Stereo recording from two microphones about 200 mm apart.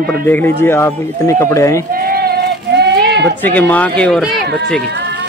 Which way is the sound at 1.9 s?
45° right (ahead or behind).